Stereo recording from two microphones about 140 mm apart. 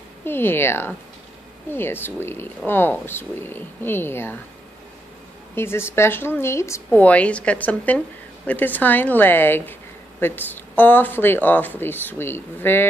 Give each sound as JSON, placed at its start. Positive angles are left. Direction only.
{"t": 0.2, "sound": "speech", "side_deg": 15}
{"t": 5.5, "sound": "speech", "side_deg": 15}